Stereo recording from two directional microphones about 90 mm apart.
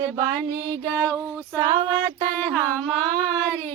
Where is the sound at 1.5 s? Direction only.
50° right (ahead or behind).